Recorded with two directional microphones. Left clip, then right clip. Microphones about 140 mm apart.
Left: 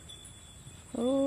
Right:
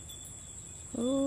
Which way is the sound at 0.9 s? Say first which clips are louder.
Left 2 dB; 15° right (ahead or behind).